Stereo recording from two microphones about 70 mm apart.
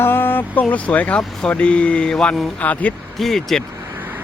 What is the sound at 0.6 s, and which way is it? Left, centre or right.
Speech, left.